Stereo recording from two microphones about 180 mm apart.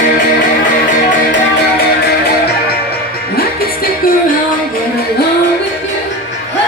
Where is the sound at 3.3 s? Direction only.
55° left (ahead or behind).